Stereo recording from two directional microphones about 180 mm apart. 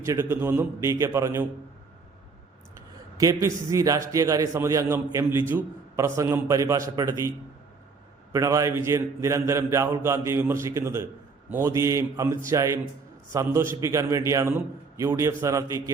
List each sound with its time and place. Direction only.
0.0 s a man's voice: 15° right (ahead or behind)
3.2 s a man's voice: 20° right (ahead or behind)